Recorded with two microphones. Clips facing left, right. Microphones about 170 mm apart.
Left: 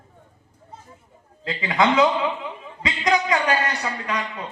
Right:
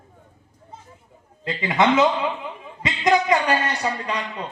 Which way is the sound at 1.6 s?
20° right (ahead or behind).